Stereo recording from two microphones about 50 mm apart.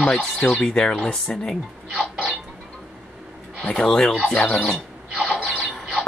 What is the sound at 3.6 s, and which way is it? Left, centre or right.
Speech, centre.